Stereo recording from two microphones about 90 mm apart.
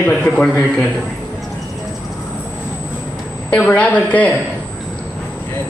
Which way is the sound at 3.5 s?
15° left (ahead or behind).